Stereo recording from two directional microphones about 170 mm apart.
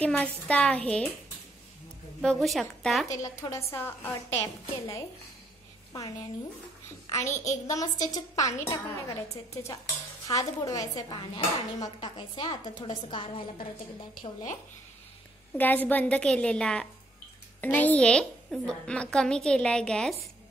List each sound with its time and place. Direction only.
0.0 s a woman's voice: 10° left (ahead or behind)
2.4 s a woman's voice: centre (ahead or behind)
3.1 s a woman's voice: 20° left (ahead or behind)
7.1 s a woman's voice: 15° left (ahead or behind)
10.2 s speech: 20° left (ahead or behind)
15.5 s a woman's voice: 10° left (ahead or behind)